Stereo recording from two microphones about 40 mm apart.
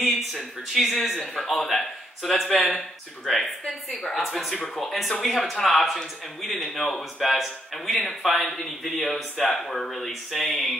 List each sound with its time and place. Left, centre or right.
0.0 s a man's voice: centre
2.5 s speech: left
3.3 s speech: centre